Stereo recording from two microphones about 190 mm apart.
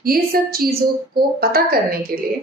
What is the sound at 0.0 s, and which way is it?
A woman's voice, 50° right (ahead or behind).